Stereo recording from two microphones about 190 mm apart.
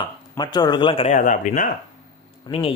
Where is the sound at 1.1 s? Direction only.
40° left (ahead or behind).